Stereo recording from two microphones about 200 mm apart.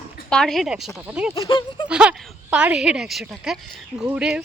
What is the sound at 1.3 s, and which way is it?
Speech, 20° left (ahead or behind).